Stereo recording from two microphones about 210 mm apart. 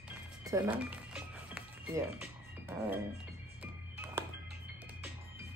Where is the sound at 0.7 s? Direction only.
5° right (ahead or behind).